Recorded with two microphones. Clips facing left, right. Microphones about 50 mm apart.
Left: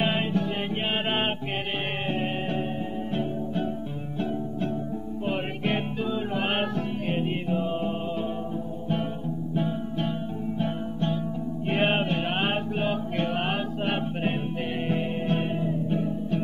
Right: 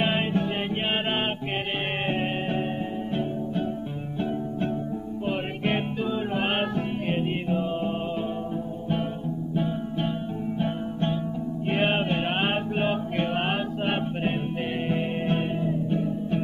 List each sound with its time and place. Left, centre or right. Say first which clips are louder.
0.0 s music: right 1 dB; centre
1.0 s music: even; centre
2.0 s music: right 1 dB; right
5.6 s music: right 1 dB; centre
9.6 s music: right 1 dB; centre
11.7 s music: even; centre
12.1 s music: right 1 dB; centre
15.3 s music: right 1 dB; centre